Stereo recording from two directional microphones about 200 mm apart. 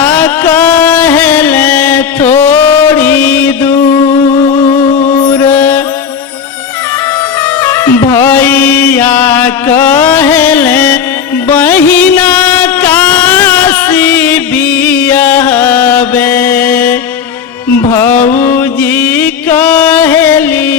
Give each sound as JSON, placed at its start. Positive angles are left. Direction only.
{"t": 0.0, "sound": "music", "side_deg": 10}
{"t": 5.5, "sound": "mantra", "side_deg": 10}
{"t": 7.6, "sound": "music", "side_deg": 10}
{"t": 8.0, "sound": "chant", "side_deg": 10}
{"t": 11.4, "sound": "music", "side_deg": 10}
{"t": 18.2, "sound": "music", "side_deg": 40}
{"t": 18.6, "sound": "music", "side_deg": 10}